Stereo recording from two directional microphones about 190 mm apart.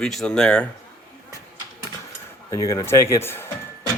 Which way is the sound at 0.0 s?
Centre (ahead or behind).